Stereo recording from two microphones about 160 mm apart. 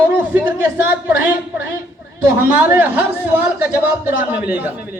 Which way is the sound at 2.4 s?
15° right (ahead or behind).